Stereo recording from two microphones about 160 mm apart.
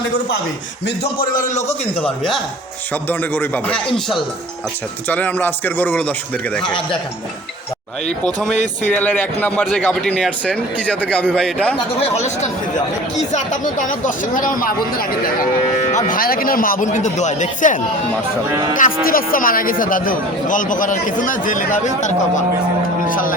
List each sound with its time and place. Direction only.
1.4 s speech: 50° left (ahead or behind)
1.6 s a man's voice: 10° left (ahead or behind)
5.0 s a man's voice: 10° left (ahead or behind)
8.0 s a man's voice: 5° left (ahead or behind)
13.3 s speech: 55° left (ahead or behind)
15.9 s speech: 50° left (ahead or behind)